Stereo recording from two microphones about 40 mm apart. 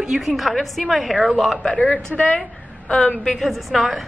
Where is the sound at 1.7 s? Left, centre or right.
Left.